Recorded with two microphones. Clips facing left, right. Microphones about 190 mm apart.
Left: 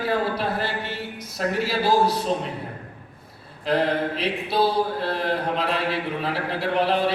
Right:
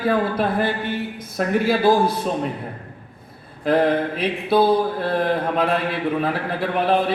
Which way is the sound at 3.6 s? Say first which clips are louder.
Right 4 dB; 50° right (ahead or behind).